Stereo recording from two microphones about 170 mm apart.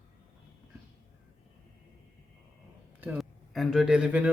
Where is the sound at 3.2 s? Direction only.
Centre (ahead or behind).